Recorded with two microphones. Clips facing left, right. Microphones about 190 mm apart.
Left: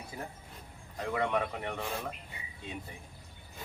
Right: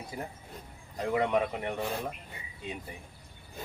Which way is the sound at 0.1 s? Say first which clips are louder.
Right 3 dB; 15° right (ahead or behind).